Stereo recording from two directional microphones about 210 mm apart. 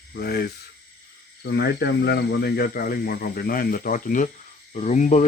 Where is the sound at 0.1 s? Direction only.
50° left (ahead or behind).